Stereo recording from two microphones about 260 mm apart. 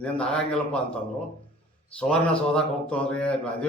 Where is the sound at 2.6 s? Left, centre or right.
Centre.